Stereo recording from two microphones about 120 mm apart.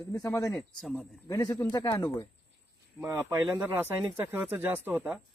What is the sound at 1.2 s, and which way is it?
Speech, 35° left (ahead or behind).